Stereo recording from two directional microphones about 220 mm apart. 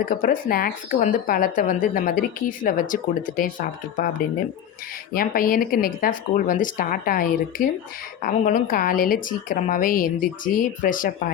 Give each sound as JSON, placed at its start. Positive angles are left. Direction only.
{"t": 0.0, "sound": "speech", "side_deg": 40}
{"t": 5.1, "sound": "speech", "side_deg": 40}